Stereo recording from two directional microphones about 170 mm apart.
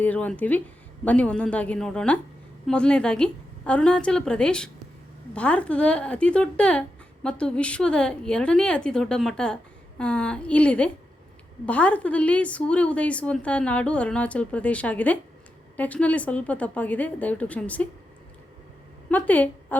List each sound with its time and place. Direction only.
0.0 s a woman's voice: 10° left (ahead or behind)
19.0 s a woman's voice: 10° left (ahead or behind)